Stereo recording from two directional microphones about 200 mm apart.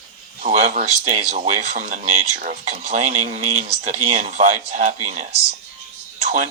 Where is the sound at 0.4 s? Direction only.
35° right (ahead or behind).